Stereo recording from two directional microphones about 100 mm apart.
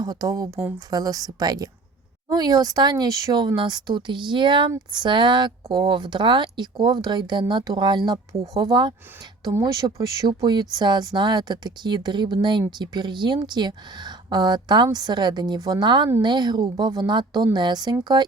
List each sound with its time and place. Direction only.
0.0 s a woman's voice: 40° right (ahead or behind)